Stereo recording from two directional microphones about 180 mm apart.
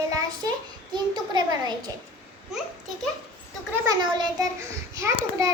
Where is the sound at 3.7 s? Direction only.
20° right (ahead or behind).